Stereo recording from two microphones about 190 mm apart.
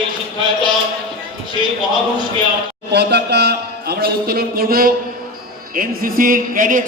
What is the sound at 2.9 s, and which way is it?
A man's voice, 60° right (ahead or behind).